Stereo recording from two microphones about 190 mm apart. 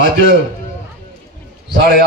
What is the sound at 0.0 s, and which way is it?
Speech, 65° right (ahead or behind).